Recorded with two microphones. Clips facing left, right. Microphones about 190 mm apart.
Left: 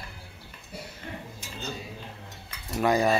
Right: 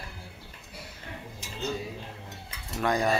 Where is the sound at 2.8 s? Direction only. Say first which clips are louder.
Left 4 dB; 5° left (ahead or behind).